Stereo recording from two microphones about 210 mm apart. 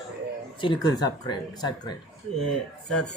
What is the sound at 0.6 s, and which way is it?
Speech, 20° left (ahead or behind).